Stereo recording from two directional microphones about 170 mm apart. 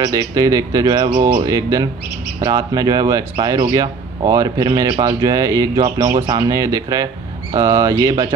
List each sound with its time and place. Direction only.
0.0 s speech: 20° right (ahead or behind)